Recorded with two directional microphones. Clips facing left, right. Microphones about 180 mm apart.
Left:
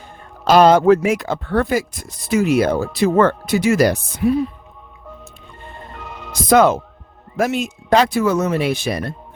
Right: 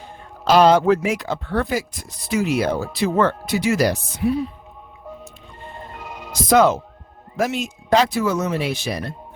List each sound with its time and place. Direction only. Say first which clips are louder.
0.4 s speech: left 3 dB; 50° left (ahead or behind)
6.0 s music: left 1 dB; 10° right (ahead or behind)
6.5 s speech: left 2 dB; 55° left (ahead or behind)